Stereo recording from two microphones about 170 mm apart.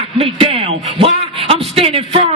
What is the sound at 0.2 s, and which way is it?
A man's voice, 35° right (ahead or behind).